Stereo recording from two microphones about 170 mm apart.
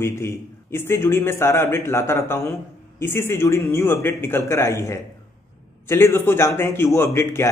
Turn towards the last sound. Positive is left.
turn(degrees=15)  # may be behind; listen again after turning